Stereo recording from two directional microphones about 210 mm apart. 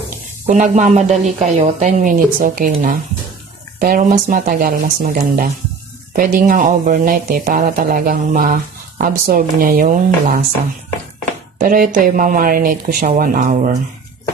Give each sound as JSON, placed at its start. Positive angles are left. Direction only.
{"t": 0.5, "sound": "speech", "side_deg": -35}
{"t": 11.6, "sound": "speech", "side_deg": -40}